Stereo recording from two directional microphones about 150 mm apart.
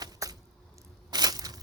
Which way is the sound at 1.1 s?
25° right (ahead or behind).